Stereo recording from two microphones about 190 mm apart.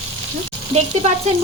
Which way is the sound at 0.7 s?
35° right (ahead or behind).